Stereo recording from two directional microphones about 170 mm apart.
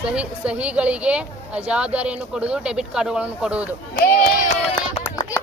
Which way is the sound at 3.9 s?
65° left (ahead or behind).